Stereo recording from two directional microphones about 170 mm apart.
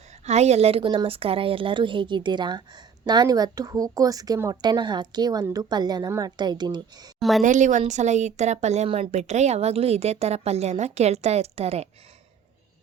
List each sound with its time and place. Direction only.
0.3 s speech: 40° right (ahead or behind); by 7.1 s 25° right (ahead or behind)
7.2 s a woman's voice: centre (ahead or behind)
7.4 s speech: 45° right (ahead or behind)